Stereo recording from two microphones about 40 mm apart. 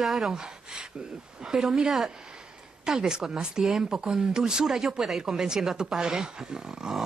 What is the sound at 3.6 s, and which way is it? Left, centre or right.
Speech, centre.